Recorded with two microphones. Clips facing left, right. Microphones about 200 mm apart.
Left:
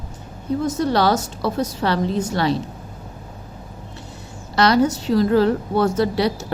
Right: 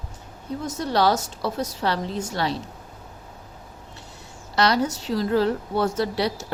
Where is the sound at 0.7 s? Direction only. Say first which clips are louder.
Left 1 dB; 60° left (ahead or behind).